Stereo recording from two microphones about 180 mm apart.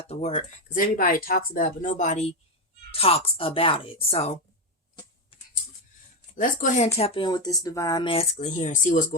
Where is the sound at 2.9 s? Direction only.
30° left (ahead or behind).